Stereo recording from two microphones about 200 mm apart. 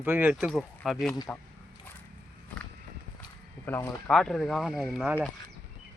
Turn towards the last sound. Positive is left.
turn(degrees=0)  # may be behind; listen again after turning